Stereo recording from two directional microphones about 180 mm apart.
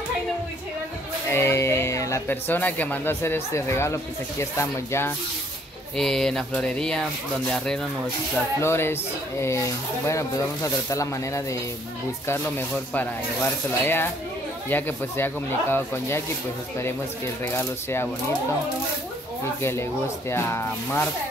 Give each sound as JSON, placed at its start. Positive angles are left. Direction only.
{"t": 1.3, "sound": "speech", "side_deg": 15}
{"t": 5.9, "sound": "speech", "side_deg": 5}
{"t": 17.5, "sound": "speech", "side_deg": 15}
{"t": 19.6, "sound": "speech", "side_deg": 15}